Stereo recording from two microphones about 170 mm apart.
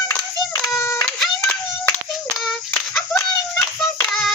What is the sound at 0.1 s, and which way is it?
Clapping, 15° left (ahead or behind).